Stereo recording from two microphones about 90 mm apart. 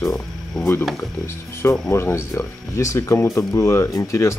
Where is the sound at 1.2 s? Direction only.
30° left (ahead or behind).